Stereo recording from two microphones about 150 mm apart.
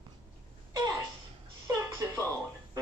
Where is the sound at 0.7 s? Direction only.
30° right (ahead or behind).